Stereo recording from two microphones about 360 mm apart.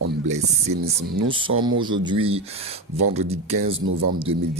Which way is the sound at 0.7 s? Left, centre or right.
Right.